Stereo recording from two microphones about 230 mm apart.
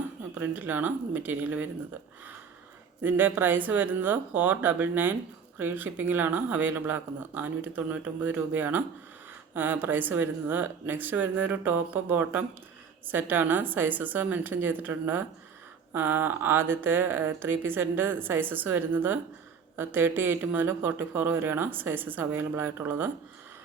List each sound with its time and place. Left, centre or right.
0.3 s speech: centre
3.0 s speech: centre